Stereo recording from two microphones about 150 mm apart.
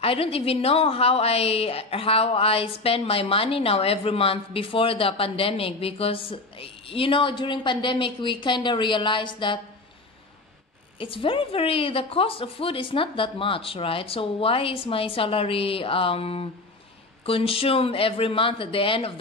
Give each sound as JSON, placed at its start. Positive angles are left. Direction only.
{"t": 0.0, "sound": "a woman's voice", "side_deg": 40}
{"t": 11.0, "sound": "a woman's voice", "side_deg": 35}